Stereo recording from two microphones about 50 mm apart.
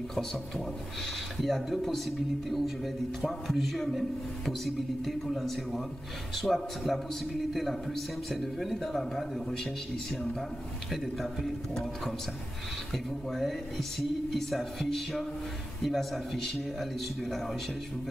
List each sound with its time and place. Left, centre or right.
1.4 s speech: centre
10.9 s speech: centre